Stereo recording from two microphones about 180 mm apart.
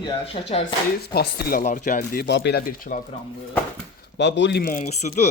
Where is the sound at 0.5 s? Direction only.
30° left (ahead or behind).